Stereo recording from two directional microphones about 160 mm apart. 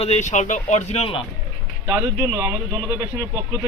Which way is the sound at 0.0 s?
45° left (ahead or behind).